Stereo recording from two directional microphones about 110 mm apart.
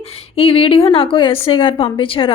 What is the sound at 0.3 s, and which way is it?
A woman's voice, 55° left (ahead or behind).